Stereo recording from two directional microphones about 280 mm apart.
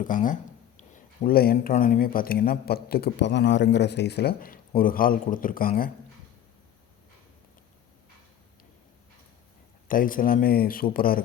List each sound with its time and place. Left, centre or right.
0.0 s speech: left
9.9 s speech: left